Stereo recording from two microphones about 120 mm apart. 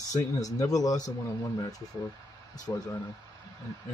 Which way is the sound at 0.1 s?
30° left (ahead or behind).